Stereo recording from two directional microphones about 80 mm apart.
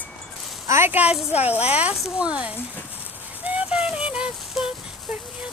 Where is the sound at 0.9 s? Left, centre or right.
Centre.